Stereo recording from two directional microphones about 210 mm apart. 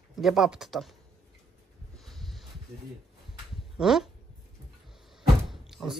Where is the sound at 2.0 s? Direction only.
Centre (ahead or behind).